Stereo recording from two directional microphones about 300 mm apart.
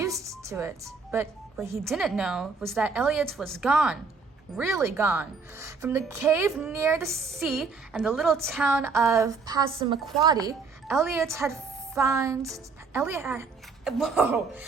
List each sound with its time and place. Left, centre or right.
0.2 s a woman's voice: centre